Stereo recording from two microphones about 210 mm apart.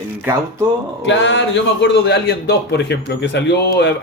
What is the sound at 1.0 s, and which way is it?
A man's voice, 60° left (ahead or behind).